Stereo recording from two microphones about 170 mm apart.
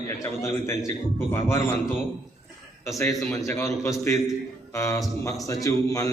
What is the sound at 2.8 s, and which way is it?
A man's voice, 15° left (ahead or behind).